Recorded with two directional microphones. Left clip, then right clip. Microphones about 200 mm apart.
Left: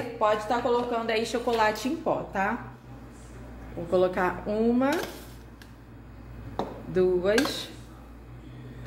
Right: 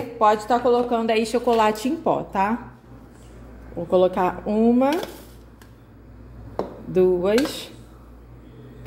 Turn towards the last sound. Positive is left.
turn(degrees=-25)  # may be behind; listen again after turning